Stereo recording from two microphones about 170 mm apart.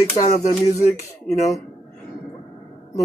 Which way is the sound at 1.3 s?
Centre (ahead or behind).